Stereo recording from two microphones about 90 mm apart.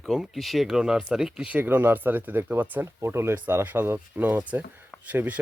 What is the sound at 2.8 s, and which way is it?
Speech, 30° right (ahead or behind).